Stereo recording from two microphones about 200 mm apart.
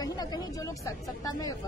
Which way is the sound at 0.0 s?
20° left (ahead or behind).